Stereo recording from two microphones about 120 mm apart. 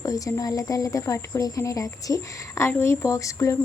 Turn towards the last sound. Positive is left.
turn(degrees=25)  # may be behind; listen again after turning